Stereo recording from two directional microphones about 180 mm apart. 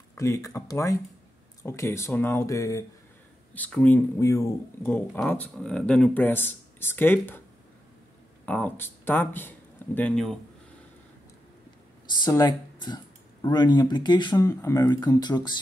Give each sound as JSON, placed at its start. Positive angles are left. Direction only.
{"t": 0.1, "sound": "speech", "side_deg": 20}
{"t": 8.5, "sound": "speech", "side_deg": 10}
{"t": 12.3, "sound": "speech", "side_deg": 20}